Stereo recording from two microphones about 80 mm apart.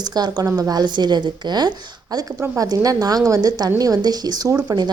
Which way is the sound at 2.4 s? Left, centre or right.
Right.